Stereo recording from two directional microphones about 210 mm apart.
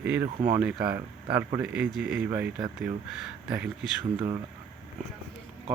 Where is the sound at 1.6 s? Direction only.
5° right (ahead or behind).